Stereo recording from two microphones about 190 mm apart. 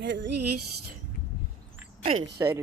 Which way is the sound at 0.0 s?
70° right (ahead or behind).